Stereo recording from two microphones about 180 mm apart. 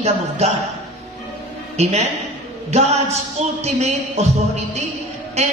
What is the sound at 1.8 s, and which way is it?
A woman's voice, 40° right (ahead or behind).